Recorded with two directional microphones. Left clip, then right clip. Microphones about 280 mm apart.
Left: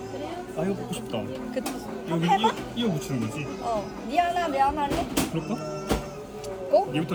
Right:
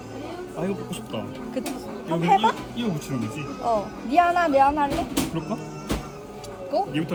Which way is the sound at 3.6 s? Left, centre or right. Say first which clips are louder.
Right 6 dB; right.